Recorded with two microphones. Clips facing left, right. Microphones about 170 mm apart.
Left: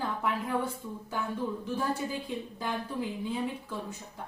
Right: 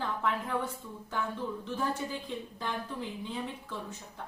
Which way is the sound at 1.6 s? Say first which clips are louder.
Even; 10° left (ahead or behind).